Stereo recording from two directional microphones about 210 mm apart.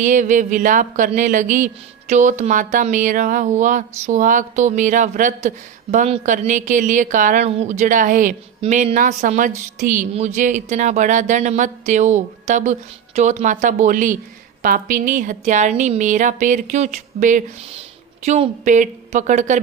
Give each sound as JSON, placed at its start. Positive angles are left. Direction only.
{"t": 0.0, "sound": "speech", "side_deg": -35}